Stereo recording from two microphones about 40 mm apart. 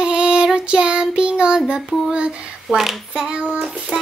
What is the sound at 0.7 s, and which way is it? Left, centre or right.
Female singing, right.